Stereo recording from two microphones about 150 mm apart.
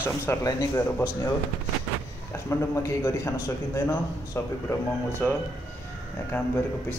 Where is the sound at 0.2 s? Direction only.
20° left (ahead or behind).